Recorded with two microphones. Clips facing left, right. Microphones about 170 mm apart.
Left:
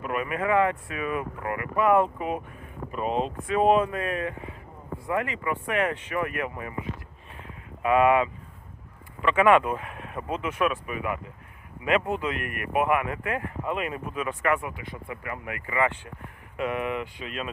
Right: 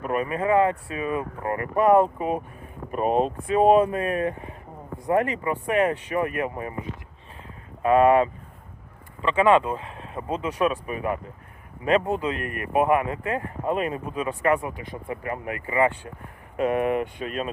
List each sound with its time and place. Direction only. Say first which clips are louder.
0.0 s speech: right 3 dB; 35° right (ahead or behind)
2.9 s speech: right 5 dB; 45° right (ahead or behind)
3.4 s speech: right 3 dB; 35° right (ahead or behind)
7.4 s a sound: right 3 dB; 35° right (ahead or behind)
9.2 s speech: right 1 dB; 30° right (ahead or behind)
16.6 s speech: right 6 dB; 40° right (ahead or behind)